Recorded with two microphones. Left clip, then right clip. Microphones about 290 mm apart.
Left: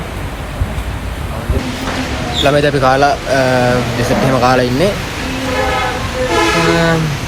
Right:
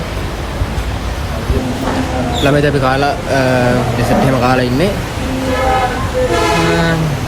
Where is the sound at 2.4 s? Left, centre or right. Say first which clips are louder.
Left 2 dB; centre.